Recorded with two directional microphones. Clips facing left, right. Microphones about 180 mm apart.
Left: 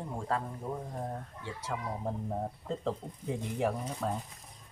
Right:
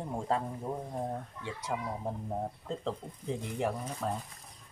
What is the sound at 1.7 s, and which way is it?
Speech, 20° right (ahead or behind).